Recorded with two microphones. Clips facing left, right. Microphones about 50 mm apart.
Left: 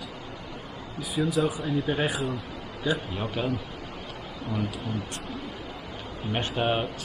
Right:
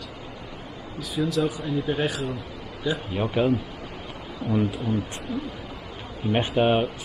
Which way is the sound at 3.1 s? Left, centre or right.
Centre.